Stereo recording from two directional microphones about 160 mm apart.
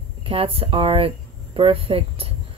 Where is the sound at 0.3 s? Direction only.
35° right (ahead or behind).